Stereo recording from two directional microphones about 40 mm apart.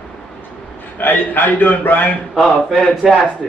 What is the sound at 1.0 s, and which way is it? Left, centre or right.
A man's voice, left.